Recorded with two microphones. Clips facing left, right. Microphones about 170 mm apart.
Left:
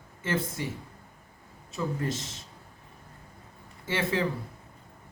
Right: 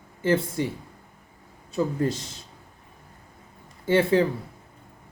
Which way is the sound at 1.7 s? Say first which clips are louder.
Right 6 dB; 30° right (ahead or behind).